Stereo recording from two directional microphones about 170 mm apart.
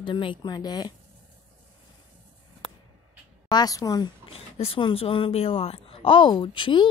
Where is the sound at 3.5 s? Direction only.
25° left (ahead or behind).